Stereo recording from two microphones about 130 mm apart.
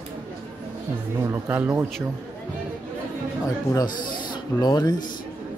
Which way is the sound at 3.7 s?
35° left (ahead or behind).